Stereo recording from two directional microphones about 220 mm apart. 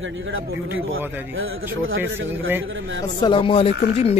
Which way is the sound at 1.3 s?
65° right (ahead or behind).